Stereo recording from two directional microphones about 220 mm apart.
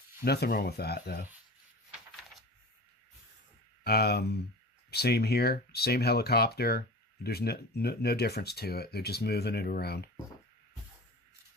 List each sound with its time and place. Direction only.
0.3 s speech: 45° left (ahead or behind)
3.8 s speech: 45° left (ahead or behind)